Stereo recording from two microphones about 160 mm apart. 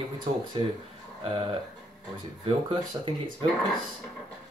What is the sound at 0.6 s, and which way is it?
Speech, 30° right (ahead or behind).